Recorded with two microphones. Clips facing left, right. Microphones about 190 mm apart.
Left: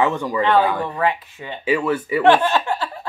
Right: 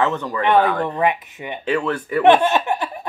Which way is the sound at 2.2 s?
20° right (ahead or behind).